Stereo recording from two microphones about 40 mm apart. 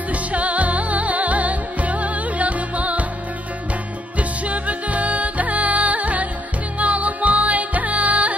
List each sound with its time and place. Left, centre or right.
0.1 s music: right
4.2 s music: right